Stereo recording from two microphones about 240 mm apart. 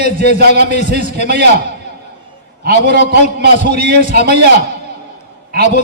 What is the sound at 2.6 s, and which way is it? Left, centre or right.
A man's voice, right.